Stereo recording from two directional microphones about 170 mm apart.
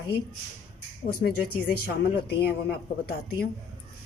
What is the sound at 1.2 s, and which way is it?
Speech, 65° left (ahead or behind).